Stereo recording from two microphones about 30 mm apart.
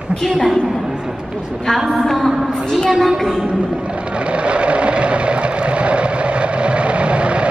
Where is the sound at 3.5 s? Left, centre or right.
Right.